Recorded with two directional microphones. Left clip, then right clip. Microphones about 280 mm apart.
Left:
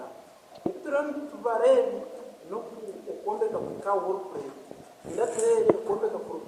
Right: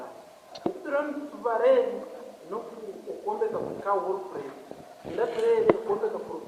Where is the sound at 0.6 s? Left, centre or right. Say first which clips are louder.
Even; centre.